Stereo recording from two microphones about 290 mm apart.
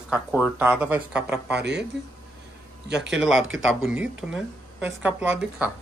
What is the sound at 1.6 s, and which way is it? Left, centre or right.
Speech, right.